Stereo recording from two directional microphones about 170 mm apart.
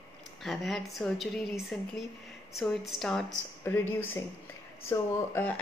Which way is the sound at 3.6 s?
15° left (ahead or behind).